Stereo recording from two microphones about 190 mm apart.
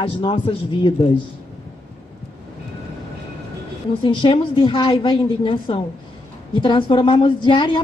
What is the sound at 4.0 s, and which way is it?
A woman's voice, 25° left (ahead or behind).